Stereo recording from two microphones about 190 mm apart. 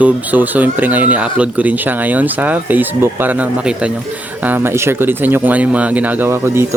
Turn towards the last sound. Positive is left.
turn(degrees=-15)  # may be behind; listen again after turning